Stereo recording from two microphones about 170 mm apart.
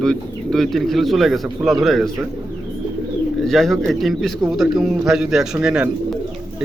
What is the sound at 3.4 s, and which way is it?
Speech, centre (ahead or behind).